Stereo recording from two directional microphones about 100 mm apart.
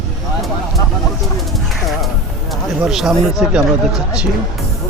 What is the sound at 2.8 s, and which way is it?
Speech, 5° right (ahead or behind).